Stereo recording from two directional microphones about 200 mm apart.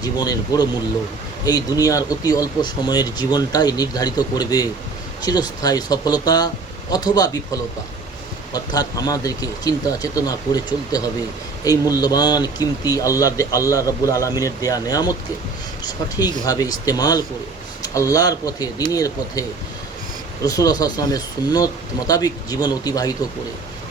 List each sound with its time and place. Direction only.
0.0 s speech: 20° left (ahead or behind)